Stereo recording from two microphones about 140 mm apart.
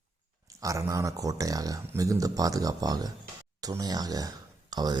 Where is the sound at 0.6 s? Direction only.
20° right (ahead or behind).